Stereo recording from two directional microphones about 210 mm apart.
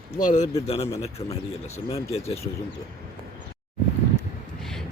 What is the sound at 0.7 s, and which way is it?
Speech, 30° left (ahead or behind).